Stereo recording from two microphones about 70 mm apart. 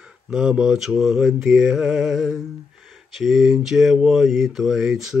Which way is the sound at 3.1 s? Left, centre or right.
Centre.